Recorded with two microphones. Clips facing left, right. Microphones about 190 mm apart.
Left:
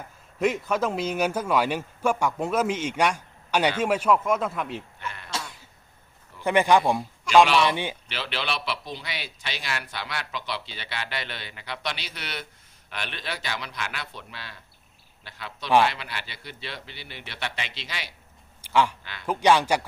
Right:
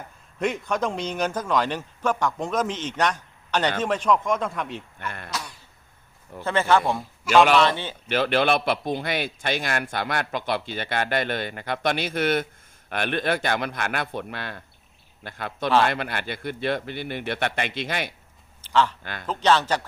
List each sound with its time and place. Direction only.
0.3 s speech: 5° left (ahead or behind)
4.9 s sheep: 50° right (ahead or behind)
6.4 s speech: 15° left (ahead or behind)
7.3 s a man's voice: 5° right (ahead or behind)
7.6 s speech: 15° left (ahead or behind)
8.0 s a man's voice: 50° right (ahead or behind)
18.6 s speech: 10° left (ahead or behind)
19.0 s a man's voice: 50° right (ahead or behind)
19.3 s speech: 10° left (ahead or behind)